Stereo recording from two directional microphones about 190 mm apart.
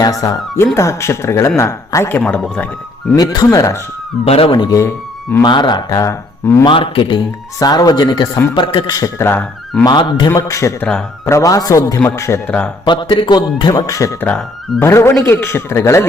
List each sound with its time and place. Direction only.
0.0 s speech: 20° left (ahead or behind)
3.2 s speech: 20° left (ahead or behind)
4.3 s speech: 30° left (ahead or behind)
6.7 s speech: 25° left (ahead or behind); by 9.8 s 5° left (ahead or behind)
9.8 s speech: 25° left (ahead or behind)
10.8 s speech: 5° left (ahead or behind)
11.3 s speech: 15° left (ahead or behind)
12.8 s speech: 25° left (ahead or behind)